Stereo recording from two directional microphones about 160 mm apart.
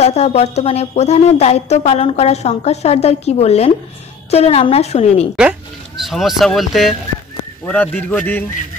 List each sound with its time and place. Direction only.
0.0 s a woman's voice: 45° left (ahead or behind)
5.3 s speech: 5° right (ahead or behind)
7.6 s a man's voice: 10° left (ahead or behind)